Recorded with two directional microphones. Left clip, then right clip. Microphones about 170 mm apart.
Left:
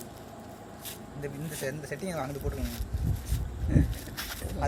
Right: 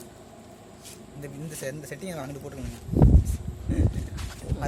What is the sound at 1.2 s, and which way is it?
Speech, 30° right (ahead or behind).